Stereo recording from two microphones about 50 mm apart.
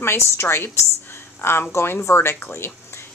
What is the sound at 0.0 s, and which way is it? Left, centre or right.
A woman's voice, left.